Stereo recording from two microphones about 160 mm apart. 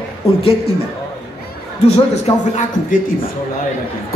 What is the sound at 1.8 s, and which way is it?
A man's voice, 45° left (ahead or behind).